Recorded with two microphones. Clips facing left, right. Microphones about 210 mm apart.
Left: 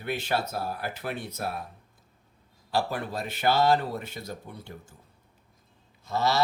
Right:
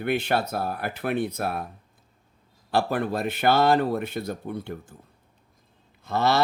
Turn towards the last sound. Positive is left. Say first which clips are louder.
# right 4 dB
turn(degrees=-55)  # may be behind; listen again after turning